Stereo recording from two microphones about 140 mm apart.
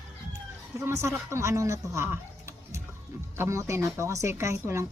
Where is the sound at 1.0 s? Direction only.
20° right (ahead or behind).